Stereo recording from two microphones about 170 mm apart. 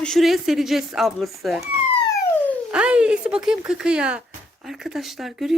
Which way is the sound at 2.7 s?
5° right (ahead or behind).